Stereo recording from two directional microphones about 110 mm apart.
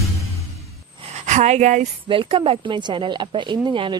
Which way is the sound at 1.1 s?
90° right.